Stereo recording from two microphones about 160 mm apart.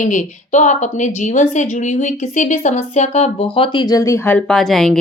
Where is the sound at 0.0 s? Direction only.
50° left (ahead or behind).